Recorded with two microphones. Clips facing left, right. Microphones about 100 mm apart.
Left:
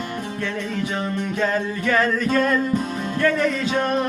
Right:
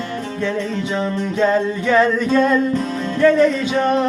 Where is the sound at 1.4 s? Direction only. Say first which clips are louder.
Right 7 dB; 20° right (ahead or behind).